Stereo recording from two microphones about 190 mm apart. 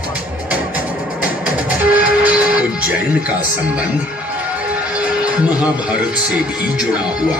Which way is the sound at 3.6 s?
5° right (ahead or behind).